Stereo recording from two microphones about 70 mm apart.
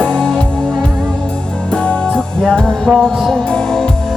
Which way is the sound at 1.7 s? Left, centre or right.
Centre.